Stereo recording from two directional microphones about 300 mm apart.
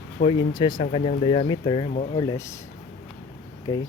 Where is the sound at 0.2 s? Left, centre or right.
Centre.